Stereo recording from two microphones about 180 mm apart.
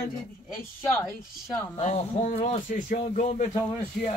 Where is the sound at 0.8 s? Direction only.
15° left (ahead or behind).